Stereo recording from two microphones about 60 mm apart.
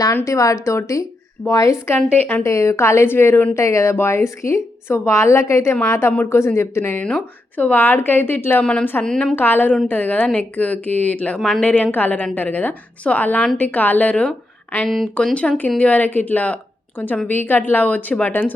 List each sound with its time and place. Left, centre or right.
0.3 s a woman's voice: left
3.5 s a woman's voice: left
7.0 s speech: left
8.6 s a woman's voice: left
9.3 s a woman's voice: left
11.3 s a woman's voice: centre
11.6 s a woman's voice: left
14.8 s speech: centre
15.1 s a woman's voice: centre